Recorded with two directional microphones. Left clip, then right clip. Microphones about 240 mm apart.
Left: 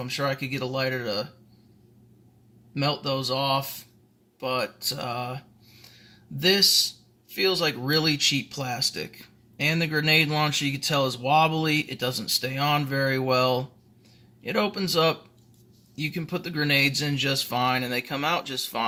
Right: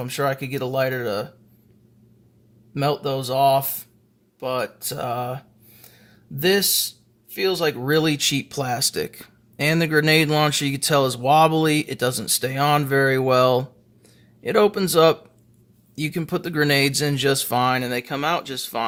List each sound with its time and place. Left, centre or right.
0.0 s speech: right
2.7 s speech: right